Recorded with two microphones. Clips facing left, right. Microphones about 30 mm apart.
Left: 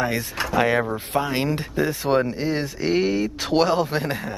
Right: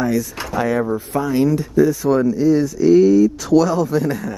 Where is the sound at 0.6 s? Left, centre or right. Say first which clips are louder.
Right 2 dB; left.